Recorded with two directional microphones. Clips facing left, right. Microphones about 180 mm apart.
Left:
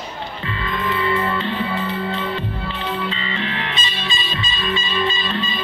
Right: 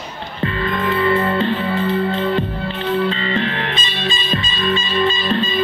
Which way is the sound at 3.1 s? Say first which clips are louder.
Right 6 dB; 45° right (ahead or behind).